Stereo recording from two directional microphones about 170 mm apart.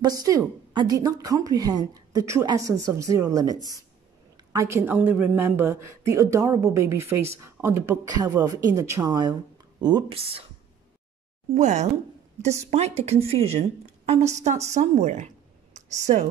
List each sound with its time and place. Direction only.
0.0 s a woman's voice: 20° right (ahead or behind)
11.5 s a woman's voice: 45° right (ahead or behind)
15.7 s a sound: 45° right (ahead or behind)